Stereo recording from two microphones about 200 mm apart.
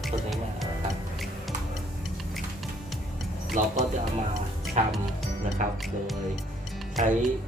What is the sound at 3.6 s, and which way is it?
Speech, 40° right (ahead or behind).